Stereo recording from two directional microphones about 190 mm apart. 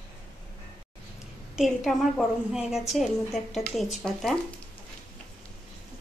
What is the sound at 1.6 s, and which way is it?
A woman's voice, centre (ahead or behind).